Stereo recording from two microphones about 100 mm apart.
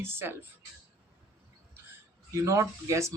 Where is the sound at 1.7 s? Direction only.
25° right (ahead or behind).